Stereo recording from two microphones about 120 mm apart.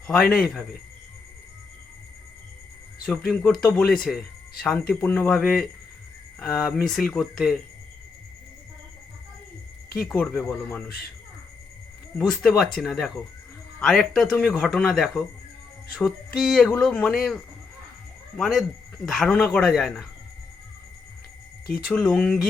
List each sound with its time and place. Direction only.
0.1 s speech: 5° left (ahead or behind)
3.1 s speech: 5° left (ahead or behind)
4.9 s speech: 15° left (ahead or behind)
5.3 s speech: 5° left (ahead or behind)
9.9 s speech: 5° left (ahead or behind)
12.1 s speech: 5° left (ahead or behind)
21.8 s speech: 5° left (ahead or behind)